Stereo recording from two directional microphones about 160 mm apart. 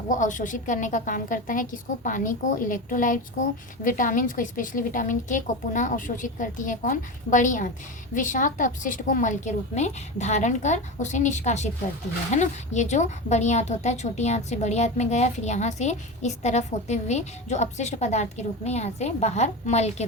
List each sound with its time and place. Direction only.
0.1 s a woman's voice: 50° left (ahead or behind)